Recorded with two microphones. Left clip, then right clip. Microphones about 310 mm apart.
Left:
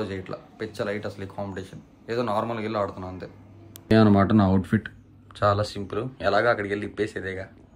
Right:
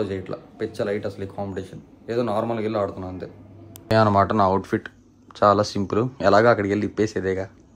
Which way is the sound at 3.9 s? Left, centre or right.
Right.